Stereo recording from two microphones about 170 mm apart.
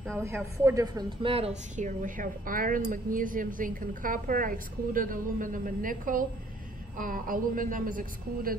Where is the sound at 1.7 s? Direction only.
50° right (ahead or behind).